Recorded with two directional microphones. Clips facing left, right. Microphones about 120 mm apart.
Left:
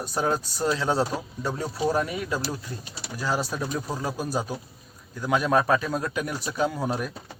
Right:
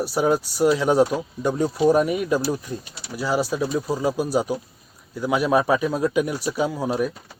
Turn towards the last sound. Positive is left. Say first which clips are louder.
# right 4 dB
turn(degrees=-5)  # may be behind; listen again after turning